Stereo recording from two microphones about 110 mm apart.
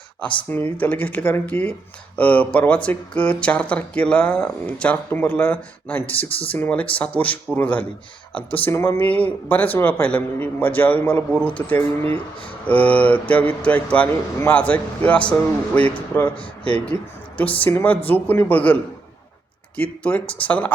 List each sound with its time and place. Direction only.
0.5 s speech: 15° left (ahead or behind)